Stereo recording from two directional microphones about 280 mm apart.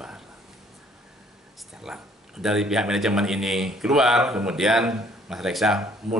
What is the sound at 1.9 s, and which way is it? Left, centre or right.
Speech, centre.